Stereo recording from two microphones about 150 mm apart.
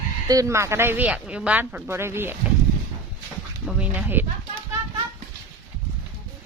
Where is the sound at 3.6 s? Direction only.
5° right (ahead or behind).